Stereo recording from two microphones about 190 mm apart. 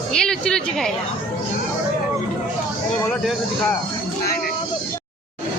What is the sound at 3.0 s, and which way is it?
Speech, 5° left (ahead or behind).